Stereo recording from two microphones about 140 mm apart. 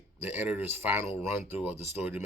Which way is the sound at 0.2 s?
15° right (ahead or behind).